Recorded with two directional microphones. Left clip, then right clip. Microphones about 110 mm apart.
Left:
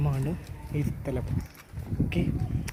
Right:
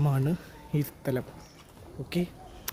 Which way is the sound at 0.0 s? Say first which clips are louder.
Right 3 dB; 75° right (ahead or behind).